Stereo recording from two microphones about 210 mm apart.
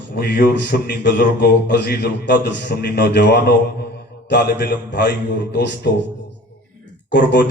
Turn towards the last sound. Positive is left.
turn(degrees=55)  # may be behind; listen again after turning